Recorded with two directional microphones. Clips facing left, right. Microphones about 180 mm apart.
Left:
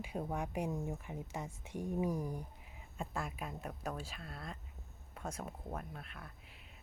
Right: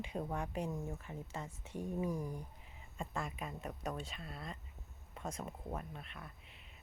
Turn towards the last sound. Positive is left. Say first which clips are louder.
# even
turn(degrees=0)  # may be behind; listen again after turning